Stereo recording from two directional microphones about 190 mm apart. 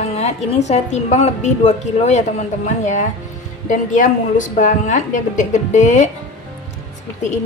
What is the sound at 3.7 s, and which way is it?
A woman's voice, 40° left (ahead or behind).